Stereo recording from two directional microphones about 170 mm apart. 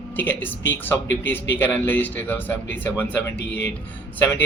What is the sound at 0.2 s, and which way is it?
Speech, 10° left (ahead or behind).